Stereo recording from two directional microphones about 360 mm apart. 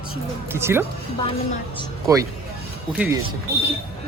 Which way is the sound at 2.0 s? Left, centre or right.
Centre.